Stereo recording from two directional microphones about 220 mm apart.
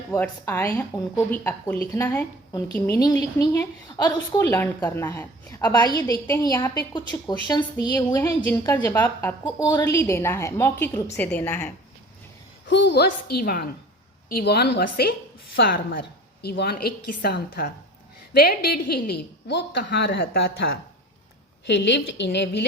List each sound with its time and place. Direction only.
0.1 s a woman's voice: 10° left (ahead or behind)
12.6 s a woman's voice: 55° left (ahead or behind)
21.7 s a woman's voice: 55° left (ahead or behind)